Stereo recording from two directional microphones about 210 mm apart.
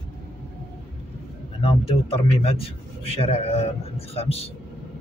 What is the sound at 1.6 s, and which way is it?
Speech, 25° left (ahead or behind).